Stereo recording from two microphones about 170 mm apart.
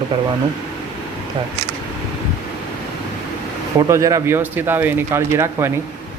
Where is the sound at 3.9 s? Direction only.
20° right (ahead or behind).